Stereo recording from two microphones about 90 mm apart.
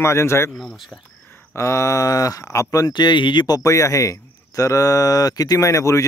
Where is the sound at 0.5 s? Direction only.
5° left (ahead or behind).